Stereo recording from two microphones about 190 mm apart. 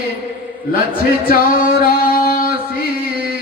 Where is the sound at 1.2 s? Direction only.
50° left (ahead or behind).